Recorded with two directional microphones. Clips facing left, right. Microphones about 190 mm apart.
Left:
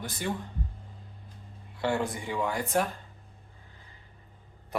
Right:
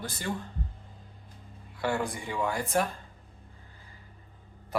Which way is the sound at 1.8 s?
20° left (ahead or behind).